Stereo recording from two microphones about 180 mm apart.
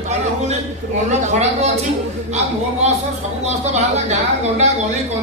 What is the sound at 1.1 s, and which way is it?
Speech, 40° right (ahead or behind).